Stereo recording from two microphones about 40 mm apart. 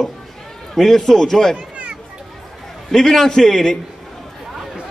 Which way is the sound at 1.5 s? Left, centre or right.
Right.